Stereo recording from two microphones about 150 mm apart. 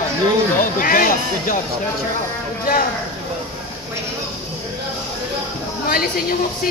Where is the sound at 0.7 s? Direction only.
70° left (ahead or behind).